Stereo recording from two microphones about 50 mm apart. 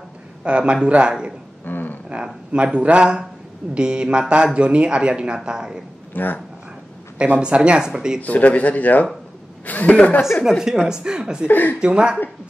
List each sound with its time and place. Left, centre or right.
0.4 s speech: right
1.6 s a sound: left
2.0 s speech: right
6.1 s speech: left
7.3 s speech: right
8.2 s speech: left
10.9 s a woman's voice: centre
11.4 s speech: left
11.8 s speech: centre